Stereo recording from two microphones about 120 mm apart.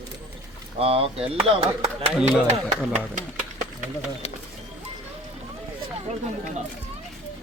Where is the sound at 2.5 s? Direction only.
75° right (ahead or behind).